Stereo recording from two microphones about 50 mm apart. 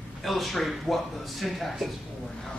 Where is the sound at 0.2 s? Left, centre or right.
Centre.